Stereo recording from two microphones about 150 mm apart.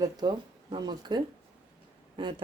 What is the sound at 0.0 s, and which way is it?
Speech, 30° right (ahead or behind).